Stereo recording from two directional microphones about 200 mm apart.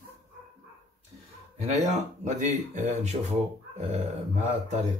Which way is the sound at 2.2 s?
35° right (ahead or behind).